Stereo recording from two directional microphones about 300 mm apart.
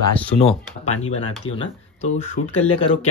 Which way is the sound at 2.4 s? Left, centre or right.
Left.